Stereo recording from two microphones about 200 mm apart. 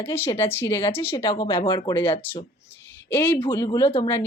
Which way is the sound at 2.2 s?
10° left (ahead or behind).